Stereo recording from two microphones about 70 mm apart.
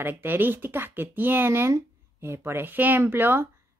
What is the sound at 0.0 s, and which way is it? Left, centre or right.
Speech, right.